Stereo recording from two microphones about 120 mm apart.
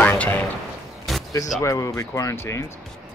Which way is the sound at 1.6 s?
25° left (ahead or behind).